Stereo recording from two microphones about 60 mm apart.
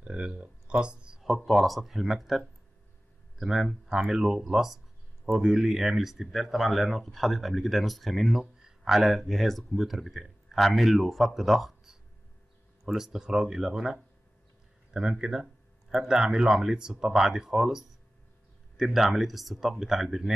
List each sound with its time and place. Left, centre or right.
0.0 s a sound: centre
1.2 s speech: centre
8.5 s speech: centre